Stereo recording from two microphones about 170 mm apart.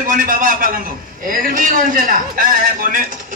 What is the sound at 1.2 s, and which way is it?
A man's voice, 55° right (ahead or behind).